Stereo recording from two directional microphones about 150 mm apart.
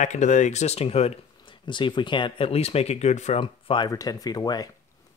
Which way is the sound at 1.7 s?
30° left (ahead or behind).